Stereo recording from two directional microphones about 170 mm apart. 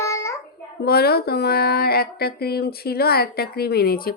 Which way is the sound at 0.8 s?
65° left (ahead or behind).